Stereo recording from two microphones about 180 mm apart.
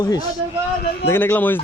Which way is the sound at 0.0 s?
20° left (ahead or behind).